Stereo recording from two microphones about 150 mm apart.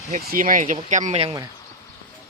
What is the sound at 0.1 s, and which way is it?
Speech, 65° right (ahead or behind).